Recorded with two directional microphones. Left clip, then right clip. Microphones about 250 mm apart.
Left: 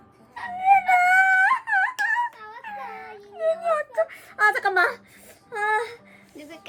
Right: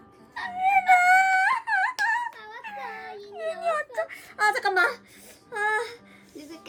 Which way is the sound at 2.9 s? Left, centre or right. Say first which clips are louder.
Left 1 dB; centre.